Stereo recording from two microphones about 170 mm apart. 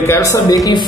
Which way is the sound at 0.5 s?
20° left (ahead or behind).